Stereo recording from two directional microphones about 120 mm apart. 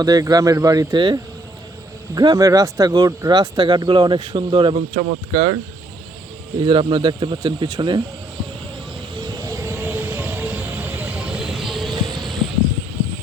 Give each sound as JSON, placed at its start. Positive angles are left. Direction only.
{"t": 0.0, "sound": "speech", "side_deg": -30}
{"t": 6.6, "sound": "speech", "side_deg": -45}
{"t": 9.5, "sound": "vehicle", "side_deg": -20}
{"t": 11.3, "sound": "vehicle", "side_deg": 0}